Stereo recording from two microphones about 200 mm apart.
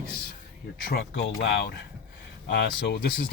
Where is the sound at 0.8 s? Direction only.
50° left (ahead or behind).